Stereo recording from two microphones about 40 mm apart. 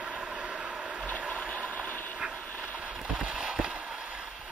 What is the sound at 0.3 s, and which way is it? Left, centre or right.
Vehicle, right.